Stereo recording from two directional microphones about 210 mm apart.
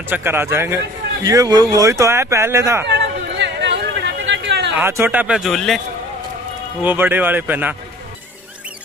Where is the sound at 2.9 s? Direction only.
55° right (ahead or behind).